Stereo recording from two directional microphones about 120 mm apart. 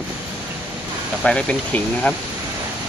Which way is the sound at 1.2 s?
5° left (ahead or behind).